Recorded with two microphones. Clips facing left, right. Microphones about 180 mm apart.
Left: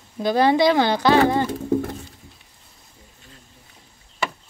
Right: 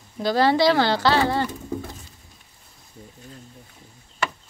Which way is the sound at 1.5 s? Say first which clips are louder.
Left 9 dB; 55° left (ahead or behind).